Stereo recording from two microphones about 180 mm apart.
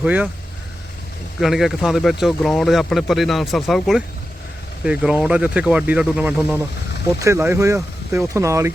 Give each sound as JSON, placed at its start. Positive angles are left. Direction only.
{"t": 0.0, "sound": "speech", "side_deg": -10}
{"t": 1.4, "sound": "speech", "side_deg": 0}